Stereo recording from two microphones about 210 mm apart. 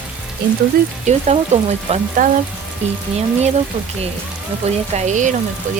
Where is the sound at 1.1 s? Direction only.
35° right (ahead or behind).